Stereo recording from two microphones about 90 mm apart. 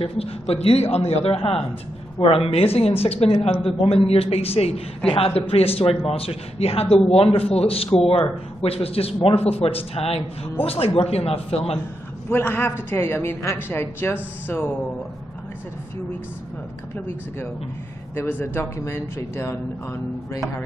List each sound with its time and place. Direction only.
0.0 s a man's voice: 90° left
12.3 s a woman's voice: 25° left (ahead or behind)
18.1 s a man's voice: 25° left (ahead or behind)